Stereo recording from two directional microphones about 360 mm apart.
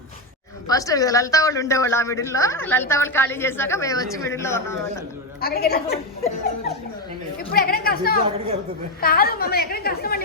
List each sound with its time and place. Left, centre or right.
0.7 s a woman's voice: centre
5.4 s a woman's voice: left
7.5 s a woman's voice: left